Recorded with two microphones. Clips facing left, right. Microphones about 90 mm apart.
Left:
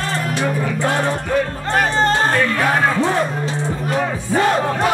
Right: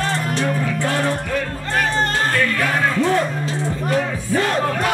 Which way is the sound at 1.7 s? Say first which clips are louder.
Left 4 dB; 30° left (ahead or behind).